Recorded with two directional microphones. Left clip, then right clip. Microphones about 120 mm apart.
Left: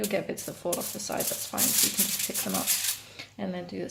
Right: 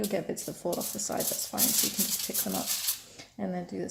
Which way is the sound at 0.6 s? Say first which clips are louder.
Left 1 dB; 45° right (ahead or behind).